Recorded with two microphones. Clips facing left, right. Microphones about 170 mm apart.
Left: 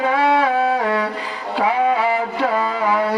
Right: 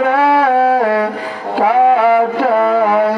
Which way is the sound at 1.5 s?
60° right (ahead or behind).